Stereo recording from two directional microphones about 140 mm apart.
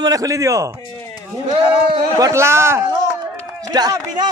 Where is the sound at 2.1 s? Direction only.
20° right (ahead or behind).